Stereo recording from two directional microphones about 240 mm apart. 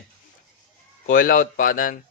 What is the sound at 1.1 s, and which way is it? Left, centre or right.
Speech, left.